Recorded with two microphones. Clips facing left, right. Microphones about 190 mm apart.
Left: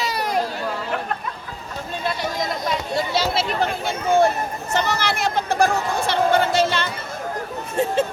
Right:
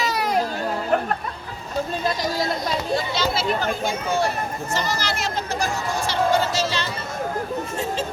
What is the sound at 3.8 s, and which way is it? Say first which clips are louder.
Speech: left 5 dB; 55° left (ahead or behind).